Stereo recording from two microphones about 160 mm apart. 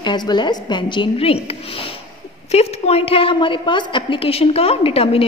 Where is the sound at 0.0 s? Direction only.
25° left (ahead or behind).